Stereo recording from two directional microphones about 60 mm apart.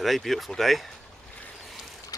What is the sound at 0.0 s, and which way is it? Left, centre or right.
Speech, centre.